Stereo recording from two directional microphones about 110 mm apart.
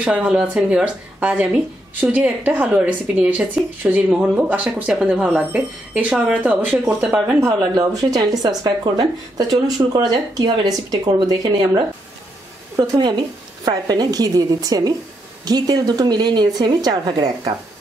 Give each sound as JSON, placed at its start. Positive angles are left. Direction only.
{"t": 0.0, "sound": "speech", "side_deg": -10}